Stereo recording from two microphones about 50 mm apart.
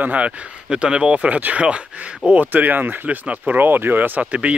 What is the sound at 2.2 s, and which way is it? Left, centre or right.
Speech, right.